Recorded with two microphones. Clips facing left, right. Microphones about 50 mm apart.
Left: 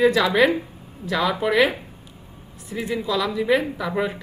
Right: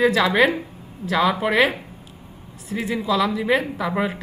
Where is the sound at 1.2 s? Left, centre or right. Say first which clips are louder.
Right 2 dB; centre.